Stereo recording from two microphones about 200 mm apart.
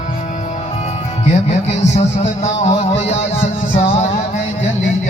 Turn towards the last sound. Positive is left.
turn(degrees=35)  # may be behind; listen again after turning